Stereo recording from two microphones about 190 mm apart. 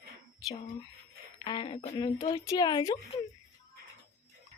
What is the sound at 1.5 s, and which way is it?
Speech, 25° left (ahead or behind).